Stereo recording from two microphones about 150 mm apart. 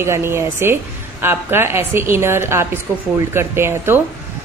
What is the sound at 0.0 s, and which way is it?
A woman's voice, 15° right (ahead or behind).